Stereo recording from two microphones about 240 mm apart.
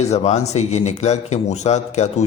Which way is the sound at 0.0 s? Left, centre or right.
Left.